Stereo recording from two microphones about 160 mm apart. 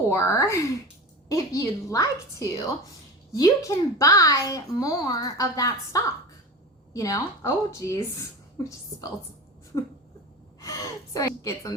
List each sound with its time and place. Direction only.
0.1 s a child's voice: 20° left (ahead or behind)
10.6 s a child's voice: 20° left (ahead or behind)